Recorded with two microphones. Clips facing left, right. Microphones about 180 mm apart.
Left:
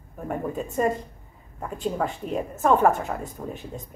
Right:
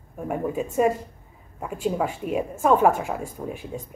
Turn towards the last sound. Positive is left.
turn(degrees=-10)  # may be behind; listen again after turning